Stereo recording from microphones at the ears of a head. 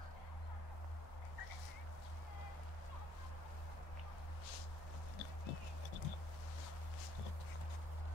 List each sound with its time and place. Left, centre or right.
5.2 s music: left